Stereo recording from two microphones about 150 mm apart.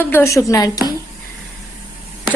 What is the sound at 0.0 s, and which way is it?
Speech, 15° left (ahead or behind).